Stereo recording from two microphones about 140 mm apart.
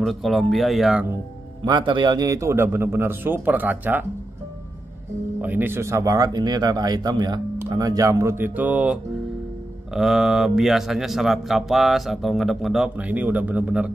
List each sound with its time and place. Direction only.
0.0 s speech: centre (ahead or behind)
1.6 s a man's voice: 35° right (ahead or behind); by 4.0 s 10° right (ahead or behind)
5.4 s speech: 15° right (ahead or behind)